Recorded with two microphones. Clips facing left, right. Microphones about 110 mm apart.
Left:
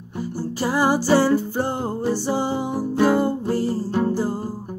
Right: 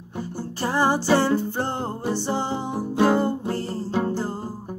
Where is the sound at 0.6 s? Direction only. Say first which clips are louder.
Left 2 dB; 10° left (ahead or behind).